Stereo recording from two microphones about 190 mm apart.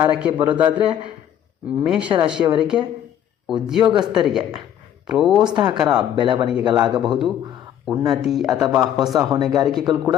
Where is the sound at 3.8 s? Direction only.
25° right (ahead or behind).